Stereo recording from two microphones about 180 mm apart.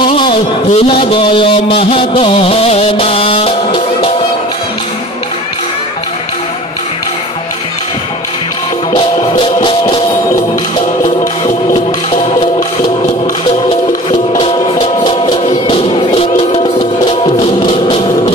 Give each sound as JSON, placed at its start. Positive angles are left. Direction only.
{"t": 0.0, "sound": "a sound", "side_deg": 25}
{"t": 0.7, "sound": "a man's voice", "side_deg": 30}
{"t": 9.4, "sound": "music", "side_deg": 25}
{"t": 11.4, "sound": "music", "side_deg": 30}
{"t": 14.4, "sound": "music", "side_deg": 30}